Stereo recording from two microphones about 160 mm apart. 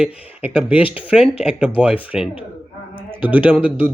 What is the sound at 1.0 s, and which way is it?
Speech, 5° right (ahead or behind).